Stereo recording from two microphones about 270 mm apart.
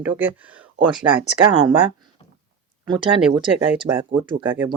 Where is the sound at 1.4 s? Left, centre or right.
Centre.